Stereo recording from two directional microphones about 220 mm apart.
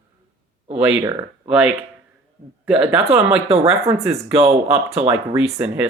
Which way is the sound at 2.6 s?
5° right (ahead or behind).